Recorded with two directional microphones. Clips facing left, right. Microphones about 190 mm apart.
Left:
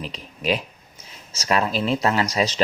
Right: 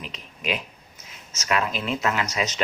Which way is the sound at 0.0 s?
35° left (ahead or behind).